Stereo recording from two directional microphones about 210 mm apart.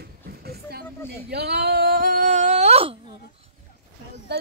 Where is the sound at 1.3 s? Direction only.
50° right (ahead or behind); by 3.2 s 25° right (ahead or behind).